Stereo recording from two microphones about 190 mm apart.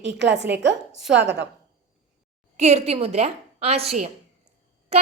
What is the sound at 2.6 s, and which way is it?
Speech, 35° right (ahead or behind).